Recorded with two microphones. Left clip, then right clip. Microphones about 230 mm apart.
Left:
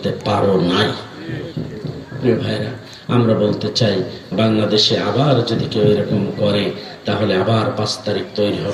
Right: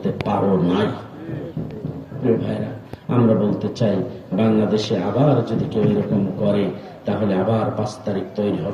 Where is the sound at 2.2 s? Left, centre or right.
Left.